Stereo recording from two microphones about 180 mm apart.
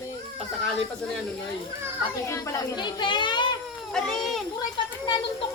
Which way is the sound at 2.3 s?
15° left (ahead or behind).